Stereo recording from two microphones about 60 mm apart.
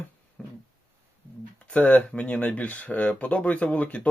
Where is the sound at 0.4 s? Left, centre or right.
Centre.